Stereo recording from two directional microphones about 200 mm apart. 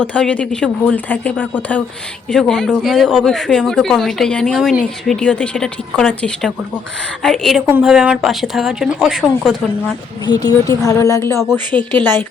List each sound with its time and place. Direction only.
0.0 s speech: 5° left (ahead or behind)
10.2 s speech: 20° left (ahead or behind)